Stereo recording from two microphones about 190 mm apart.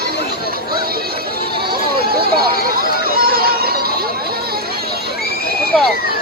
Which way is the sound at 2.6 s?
50° right (ahead or behind).